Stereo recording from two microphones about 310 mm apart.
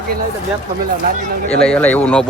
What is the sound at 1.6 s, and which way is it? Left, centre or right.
Speech, centre.